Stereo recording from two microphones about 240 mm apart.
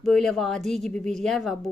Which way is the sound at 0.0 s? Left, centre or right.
Centre.